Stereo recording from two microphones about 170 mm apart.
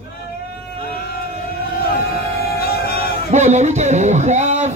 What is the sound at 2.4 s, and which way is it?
Music, 65° left (ahead or behind).